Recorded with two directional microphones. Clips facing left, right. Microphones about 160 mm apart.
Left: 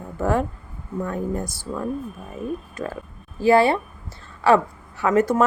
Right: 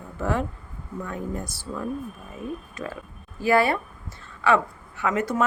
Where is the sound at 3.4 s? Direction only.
30° left (ahead or behind).